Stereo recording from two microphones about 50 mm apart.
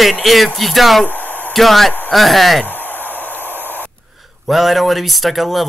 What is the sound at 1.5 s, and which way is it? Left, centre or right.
A man's voice, centre.